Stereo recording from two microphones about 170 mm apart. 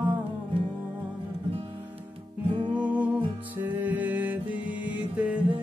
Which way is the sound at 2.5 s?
25° right (ahead or behind).